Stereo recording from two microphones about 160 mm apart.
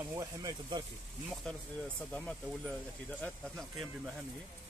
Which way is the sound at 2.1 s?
5° left (ahead or behind).